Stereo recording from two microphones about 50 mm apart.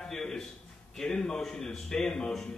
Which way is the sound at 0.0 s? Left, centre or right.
Centre.